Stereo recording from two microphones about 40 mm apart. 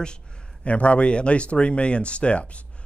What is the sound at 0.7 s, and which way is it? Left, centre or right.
Speech, left.